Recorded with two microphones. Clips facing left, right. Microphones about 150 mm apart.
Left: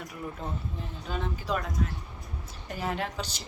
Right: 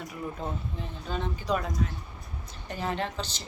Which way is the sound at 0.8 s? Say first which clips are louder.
Even; centre (ahead or behind).